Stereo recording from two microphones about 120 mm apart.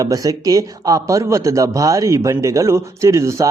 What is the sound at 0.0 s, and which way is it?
Speech, 30° right (ahead or behind).